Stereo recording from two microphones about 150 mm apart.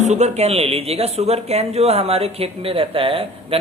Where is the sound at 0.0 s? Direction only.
50° right (ahead or behind).